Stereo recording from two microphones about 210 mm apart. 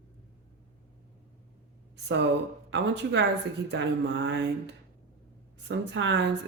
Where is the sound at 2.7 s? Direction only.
55° right (ahead or behind).